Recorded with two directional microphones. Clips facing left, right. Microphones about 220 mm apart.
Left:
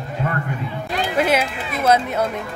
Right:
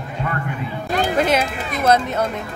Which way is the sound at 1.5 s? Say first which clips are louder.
Right 1 dB; 45° right (ahead or behind).